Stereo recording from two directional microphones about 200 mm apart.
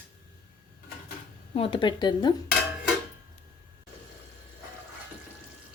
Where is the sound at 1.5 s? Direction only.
25° left (ahead or behind).